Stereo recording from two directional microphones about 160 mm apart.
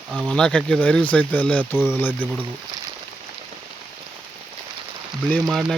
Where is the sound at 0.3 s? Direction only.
5° left (ahead or behind).